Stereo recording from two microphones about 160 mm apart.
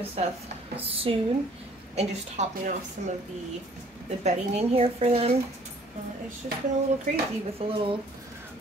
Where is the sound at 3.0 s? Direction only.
55° right (ahead or behind).